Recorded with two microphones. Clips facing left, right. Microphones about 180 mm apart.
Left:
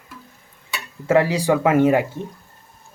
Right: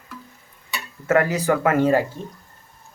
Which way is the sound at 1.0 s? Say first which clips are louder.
Left 2 dB; 15° left (ahead or behind).